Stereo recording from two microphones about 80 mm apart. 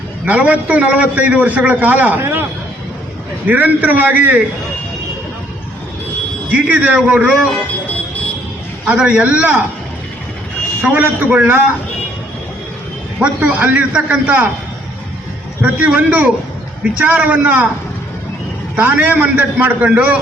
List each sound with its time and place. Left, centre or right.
0.3 s a man's voice: centre
3.4 s a man's voice: right
6.5 s a man's voice: centre
8.9 s a man's voice: centre
10.8 s a man's voice: right
13.1 s a man's voice: centre
15.6 s a man's voice: centre
18.8 s a man's voice: right